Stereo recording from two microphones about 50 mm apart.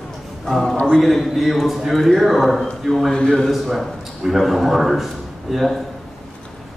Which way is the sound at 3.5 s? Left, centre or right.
Centre.